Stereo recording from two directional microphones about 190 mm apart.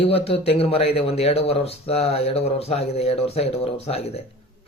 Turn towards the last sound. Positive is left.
turn(degrees=30)  # may be behind; listen again after turning